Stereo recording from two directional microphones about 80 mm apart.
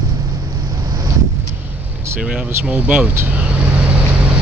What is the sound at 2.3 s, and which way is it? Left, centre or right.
Speech, centre.